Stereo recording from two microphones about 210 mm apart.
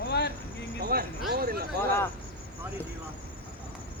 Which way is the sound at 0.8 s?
45° right (ahead or behind).